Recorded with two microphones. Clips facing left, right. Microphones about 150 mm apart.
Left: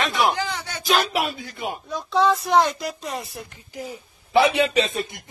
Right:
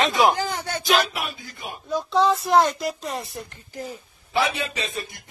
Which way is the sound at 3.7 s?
10° left (ahead or behind).